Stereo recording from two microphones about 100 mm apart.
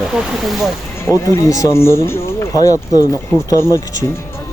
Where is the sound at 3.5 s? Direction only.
30° left (ahead or behind).